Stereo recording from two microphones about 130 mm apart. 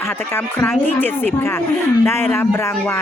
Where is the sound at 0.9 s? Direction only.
15° left (ahead or behind).